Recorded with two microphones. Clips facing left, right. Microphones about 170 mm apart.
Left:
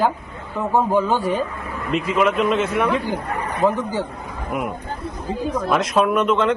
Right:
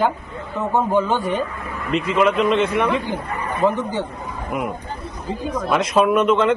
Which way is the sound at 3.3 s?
90° left.